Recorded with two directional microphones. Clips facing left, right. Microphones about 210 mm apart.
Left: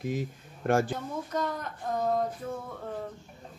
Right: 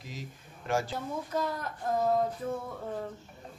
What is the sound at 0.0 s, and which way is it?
Speech, 55° left (ahead or behind).